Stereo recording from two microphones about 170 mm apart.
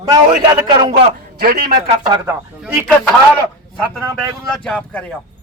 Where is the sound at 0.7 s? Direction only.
25° right (ahead or behind).